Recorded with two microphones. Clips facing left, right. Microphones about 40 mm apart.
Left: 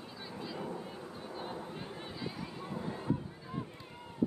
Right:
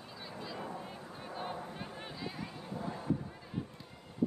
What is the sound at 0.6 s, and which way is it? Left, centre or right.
Vehicle, centre.